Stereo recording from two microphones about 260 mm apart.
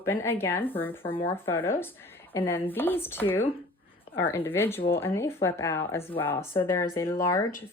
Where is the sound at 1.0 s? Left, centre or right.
Left.